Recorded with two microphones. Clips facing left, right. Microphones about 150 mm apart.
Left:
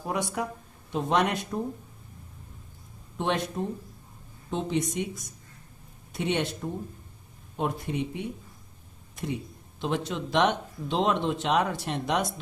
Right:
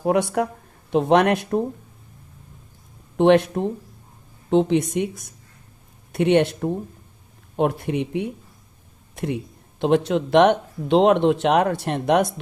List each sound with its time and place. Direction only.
0.0 s speech: 65° right (ahead or behind)
3.2 s speech: 65° right (ahead or behind)